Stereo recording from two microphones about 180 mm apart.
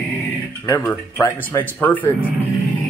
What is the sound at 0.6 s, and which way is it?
Speech, 20° left (ahead or behind).